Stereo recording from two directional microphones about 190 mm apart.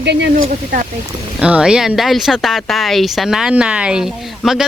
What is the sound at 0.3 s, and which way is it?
Speech, 45° right (ahead or behind).